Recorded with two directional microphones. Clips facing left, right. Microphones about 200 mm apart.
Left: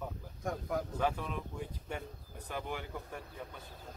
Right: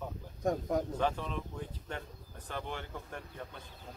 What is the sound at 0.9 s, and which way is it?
Speech, 10° left (ahead or behind).